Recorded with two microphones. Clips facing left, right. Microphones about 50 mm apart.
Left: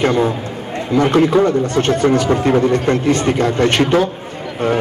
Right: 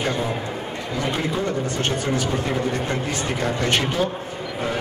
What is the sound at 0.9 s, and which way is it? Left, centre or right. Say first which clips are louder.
Speech: left 13 dB; left.